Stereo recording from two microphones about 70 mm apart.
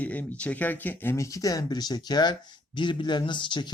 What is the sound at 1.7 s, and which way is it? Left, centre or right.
Speech, left.